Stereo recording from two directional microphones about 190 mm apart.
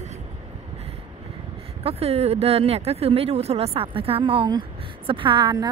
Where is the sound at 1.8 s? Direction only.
30° right (ahead or behind).